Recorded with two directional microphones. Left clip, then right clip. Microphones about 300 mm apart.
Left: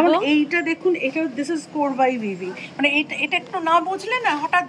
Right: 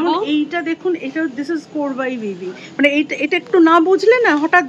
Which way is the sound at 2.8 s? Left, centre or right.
Centre.